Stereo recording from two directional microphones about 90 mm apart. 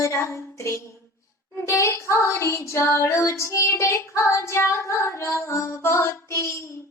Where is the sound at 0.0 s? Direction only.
35° left (ahead or behind).